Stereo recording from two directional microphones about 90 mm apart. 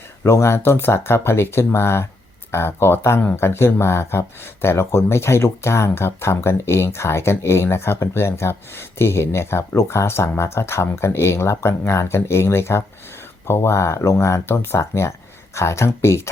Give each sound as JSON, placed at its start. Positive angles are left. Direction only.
{"t": 0.2, "sound": "speech", "side_deg": 30}